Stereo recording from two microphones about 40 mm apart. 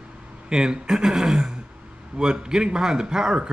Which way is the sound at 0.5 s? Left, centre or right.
Centre.